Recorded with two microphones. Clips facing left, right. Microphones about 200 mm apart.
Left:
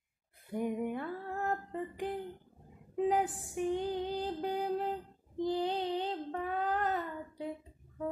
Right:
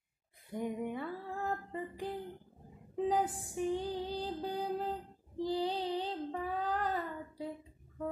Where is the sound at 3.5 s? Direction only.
15° left (ahead or behind).